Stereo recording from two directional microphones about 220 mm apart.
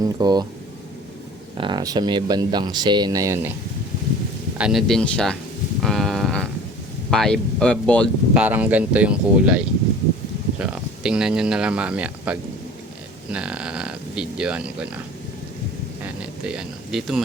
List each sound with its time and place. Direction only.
0.0 s speech: 20° right (ahead or behind)
1.5 s speech: 20° right (ahead or behind)
4.5 s speech: 5° right (ahead or behind)
5.8 s a sound: centre (ahead or behind)
7.1 s speech: centre (ahead or behind)
8.3 s speech: 5° right (ahead or behind)
16.5 s speech: centre (ahead or behind)